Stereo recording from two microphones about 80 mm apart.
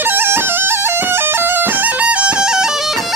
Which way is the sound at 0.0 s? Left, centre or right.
Right.